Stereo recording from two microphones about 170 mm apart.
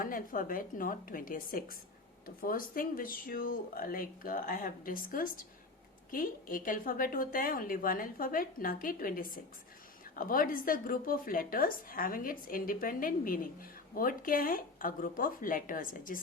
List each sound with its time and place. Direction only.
0.0 s speech: 55° left (ahead or behind)